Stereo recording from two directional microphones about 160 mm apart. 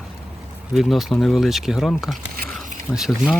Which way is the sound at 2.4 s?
65° right (ahead or behind).